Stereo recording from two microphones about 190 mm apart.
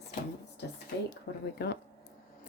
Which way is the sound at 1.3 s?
60° left (ahead or behind).